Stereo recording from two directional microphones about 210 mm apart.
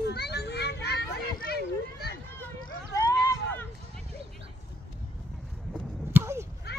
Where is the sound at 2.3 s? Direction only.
15° left (ahead or behind).